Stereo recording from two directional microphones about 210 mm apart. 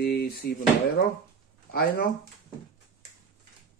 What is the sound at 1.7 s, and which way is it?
Speech, 45° left (ahead or behind).